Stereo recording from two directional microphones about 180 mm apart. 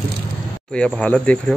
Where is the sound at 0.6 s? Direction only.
5° left (ahead or behind).